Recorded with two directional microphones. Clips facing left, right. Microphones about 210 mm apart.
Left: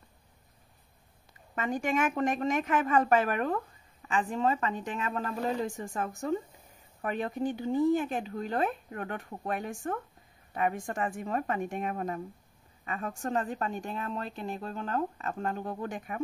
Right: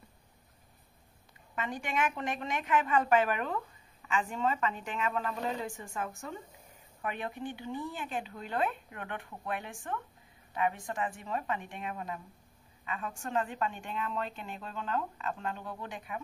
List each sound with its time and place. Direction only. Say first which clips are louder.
1.5 s a woman's voice: left 6 dB; 45° left (ahead or behind)